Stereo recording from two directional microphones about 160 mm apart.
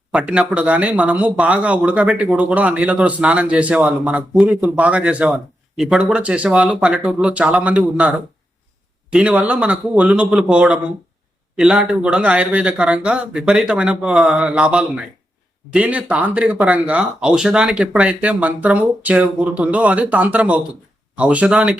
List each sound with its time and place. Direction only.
0.1 s speech: 5° right (ahead or behind)
9.1 s speech: 10° right (ahead or behind)